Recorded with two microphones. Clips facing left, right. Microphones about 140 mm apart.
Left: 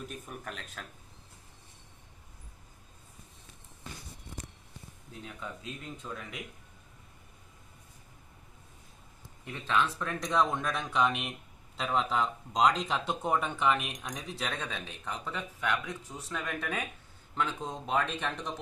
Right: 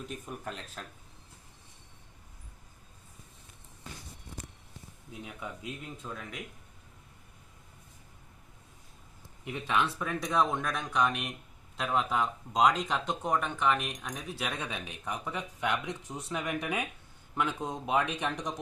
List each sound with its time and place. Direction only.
0.4 s speech: 25° right (ahead or behind)
5.2 s speech: 10° right (ahead or behind)
9.4 s speech: 15° right (ahead or behind)